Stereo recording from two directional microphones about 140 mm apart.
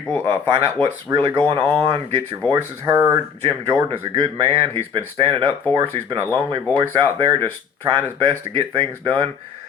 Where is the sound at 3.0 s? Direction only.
15° right (ahead or behind).